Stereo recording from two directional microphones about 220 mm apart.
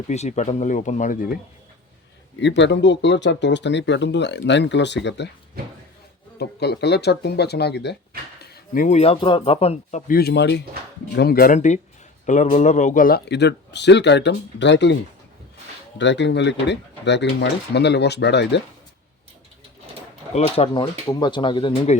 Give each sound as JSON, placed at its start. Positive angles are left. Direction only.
{"t": 0.1, "sound": "speech", "side_deg": 30}
{"t": 2.4, "sound": "speech", "side_deg": 55}
{"t": 5.6, "sound": "speech", "side_deg": -45}
{"t": 6.4, "sound": "speech", "side_deg": 50}
{"t": 10.1, "sound": "speech", "side_deg": 45}
{"t": 16.0, "sound": "speech", "side_deg": 55}
{"t": 20.3, "sound": "speech", "side_deg": 25}